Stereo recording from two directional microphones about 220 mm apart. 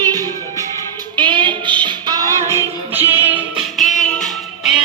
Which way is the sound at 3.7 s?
Centre (ahead or behind).